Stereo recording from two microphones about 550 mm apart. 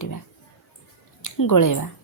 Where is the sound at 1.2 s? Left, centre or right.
Left.